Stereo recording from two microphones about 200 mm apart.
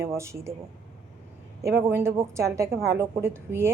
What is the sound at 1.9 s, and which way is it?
A woman's voice, 15° right (ahead or behind).